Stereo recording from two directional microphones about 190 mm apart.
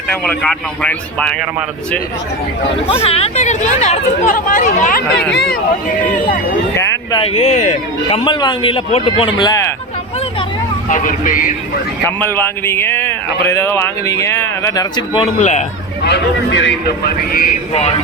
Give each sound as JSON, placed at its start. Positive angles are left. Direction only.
{"t": 0.1, "sound": "speech", "side_deg": 5}
{"t": 2.8, "sound": "speech", "side_deg": 30}
{"t": 5.3, "sound": "speech", "side_deg": 60}
{"t": 6.7, "sound": "speech", "side_deg": 20}
{"t": 7.3, "sound": "speech", "side_deg": 35}
{"t": 8.2, "sound": "speech", "side_deg": 25}
{"t": 10.8, "sound": "speech", "side_deg": 45}
{"t": 12.0, "sound": "speech", "side_deg": 10}
{"t": 15.2, "sound": "speech", "side_deg": 40}
{"t": 16.0, "sound": "speech", "side_deg": 65}